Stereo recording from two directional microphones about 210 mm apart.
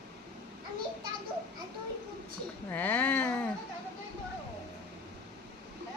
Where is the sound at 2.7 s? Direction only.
10° left (ahead or behind).